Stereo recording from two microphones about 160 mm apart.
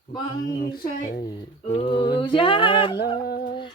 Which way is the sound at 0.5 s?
70° left (ahead or behind).